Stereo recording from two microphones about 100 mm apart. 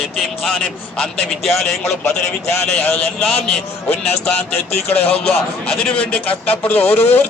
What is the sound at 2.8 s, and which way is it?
Speech, 20° left (ahead or behind).